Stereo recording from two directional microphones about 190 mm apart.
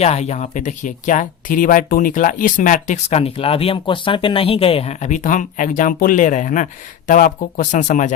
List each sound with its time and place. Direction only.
0.0 s speech: 35° left (ahead or behind)